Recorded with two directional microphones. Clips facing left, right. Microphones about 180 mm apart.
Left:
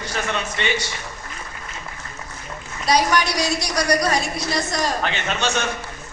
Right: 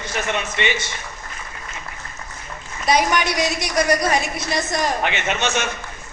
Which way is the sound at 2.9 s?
20° right (ahead or behind).